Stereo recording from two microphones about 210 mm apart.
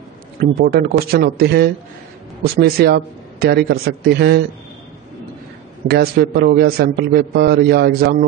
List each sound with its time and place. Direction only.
0.4 s a man's voice: 45° right (ahead or behind)
5.9 s a man's voice: 50° right (ahead or behind)